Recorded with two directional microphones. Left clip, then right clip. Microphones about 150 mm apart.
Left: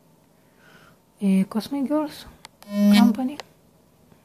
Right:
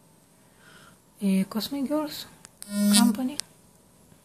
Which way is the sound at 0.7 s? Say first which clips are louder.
Even; 25° left (ahead or behind).